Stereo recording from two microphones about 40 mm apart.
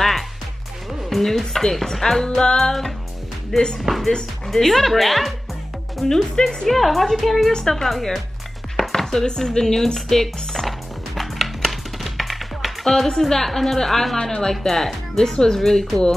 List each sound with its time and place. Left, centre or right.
1.1 s speech: centre
2.2 s speech: centre
4.5 s speech: centre
6.0 s speech: centre
6.7 s speech: centre
8.7 s chopping: centre
9.9 s speech: centre
11.1 s music: centre
14.1 s speech: centre